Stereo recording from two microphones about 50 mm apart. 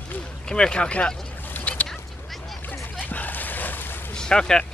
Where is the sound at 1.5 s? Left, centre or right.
Left.